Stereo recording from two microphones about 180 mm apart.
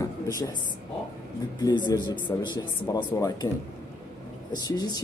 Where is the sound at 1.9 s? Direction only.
25° left (ahead or behind).